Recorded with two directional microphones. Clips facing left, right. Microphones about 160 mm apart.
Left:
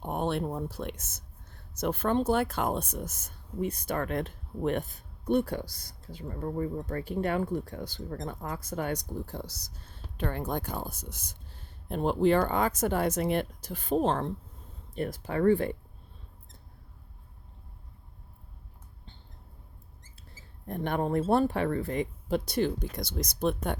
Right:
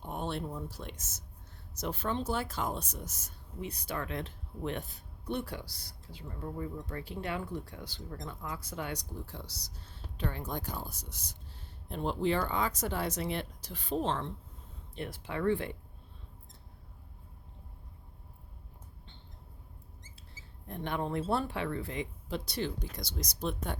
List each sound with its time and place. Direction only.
0.0 s speech: 60° left (ahead or behind)
20.3 s speech: 50° left (ahead or behind)